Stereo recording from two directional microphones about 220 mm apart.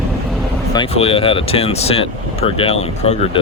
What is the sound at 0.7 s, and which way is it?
Speech, 25° left (ahead or behind).